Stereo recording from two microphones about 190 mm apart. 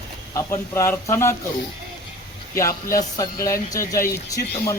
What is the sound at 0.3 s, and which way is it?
A man's voice, 15° left (ahead or behind).